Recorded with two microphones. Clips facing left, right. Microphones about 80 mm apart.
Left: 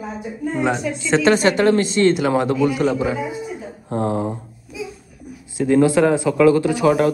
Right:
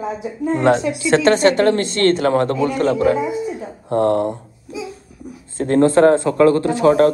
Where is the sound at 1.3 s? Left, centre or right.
Right.